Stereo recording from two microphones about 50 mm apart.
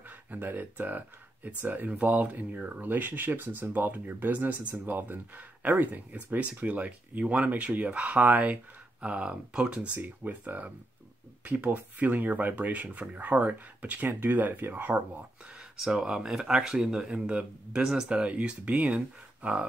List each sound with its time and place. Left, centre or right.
0.3 s speech: right
1.9 s speech: right
9.9 s speech: right
15.8 s speech: centre; by 19.6 s right